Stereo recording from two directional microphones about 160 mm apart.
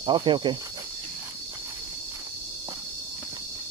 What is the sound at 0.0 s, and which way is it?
Cricket, 30° right (ahead or behind).